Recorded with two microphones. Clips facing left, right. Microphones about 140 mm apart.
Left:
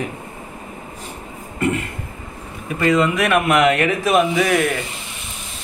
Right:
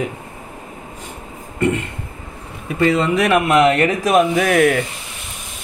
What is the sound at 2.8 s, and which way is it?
Speech, 35° right (ahead or behind).